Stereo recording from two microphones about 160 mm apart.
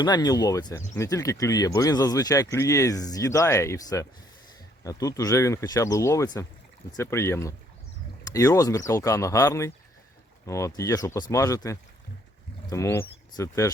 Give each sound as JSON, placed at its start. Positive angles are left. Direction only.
{"t": 0.0, "sound": "speech", "side_deg": 25}